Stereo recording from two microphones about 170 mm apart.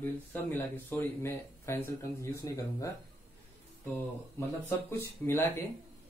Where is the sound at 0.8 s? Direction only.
10° left (ahead or behind).